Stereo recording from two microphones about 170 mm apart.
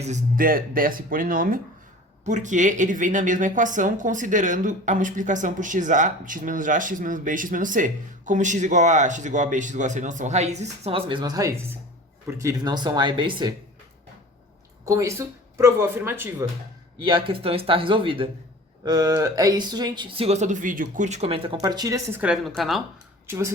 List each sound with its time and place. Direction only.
0.0 s speech: 50° right (ahead or behind)
2.2 s a woman's voice: 45° right (ahead or behind); by 13.5 s 30° right (ahead or behind)
14.8 s speech: 20° right (ahead or behind)
17.1 s speech: 30° right (ahead or behind)
22.2 s a woman's voice: centre (ahead or behind)
23.2 s speech: 15° right (ahead or behind)